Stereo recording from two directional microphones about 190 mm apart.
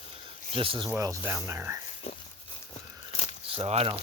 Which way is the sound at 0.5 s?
30° right (ahead or behind).